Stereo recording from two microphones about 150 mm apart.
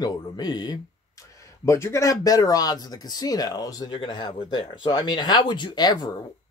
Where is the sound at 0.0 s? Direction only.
30° left (ahead or behind).